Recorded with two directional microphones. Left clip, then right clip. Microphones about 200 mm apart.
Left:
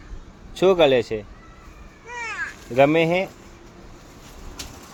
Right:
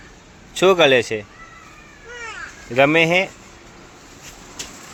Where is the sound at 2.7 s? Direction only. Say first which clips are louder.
Right 3 dB; centre (ahead or behind).